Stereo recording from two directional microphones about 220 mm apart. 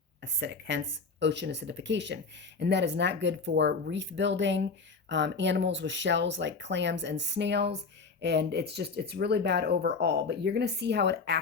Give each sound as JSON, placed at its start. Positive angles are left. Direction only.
{"t": 0.2, "sound": "speech", "side_deg": -50}